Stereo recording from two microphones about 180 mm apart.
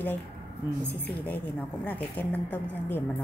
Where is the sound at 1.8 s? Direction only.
10° left (ahead or behind).